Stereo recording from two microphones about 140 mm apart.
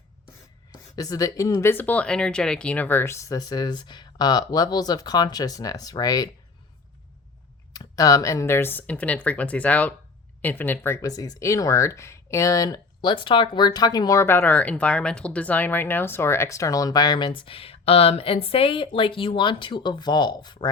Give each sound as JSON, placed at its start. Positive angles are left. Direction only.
{"t": 0.7, "sound": "speech", "side_deg": 25}
{"t": 7.7, "sound": "speech", "side_deg": 25}